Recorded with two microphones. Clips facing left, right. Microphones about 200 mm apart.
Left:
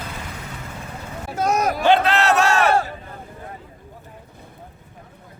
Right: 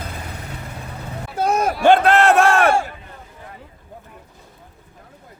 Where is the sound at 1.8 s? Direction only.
50° right (ahead or behind).